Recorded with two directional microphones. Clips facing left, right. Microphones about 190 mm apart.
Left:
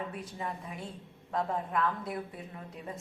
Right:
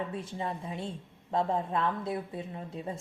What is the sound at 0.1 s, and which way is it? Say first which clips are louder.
A woman's voice: right 3 dB; 25° right (ahead or behind).